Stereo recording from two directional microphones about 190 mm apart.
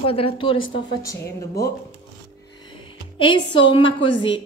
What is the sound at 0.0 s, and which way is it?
Speech, 30° left (ahead or behind).